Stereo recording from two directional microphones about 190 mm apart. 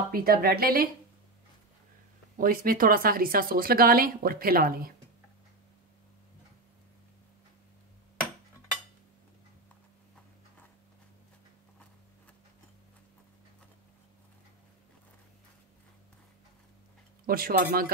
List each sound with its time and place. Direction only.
0.1 s speech: 50° right (ahead or behind)
2.3 s speech: 50° right (ahead or behind)
17.3 s speech: 50° right (ahead or behind)